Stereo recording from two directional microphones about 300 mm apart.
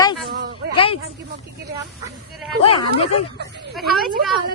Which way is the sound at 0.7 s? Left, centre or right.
Centre.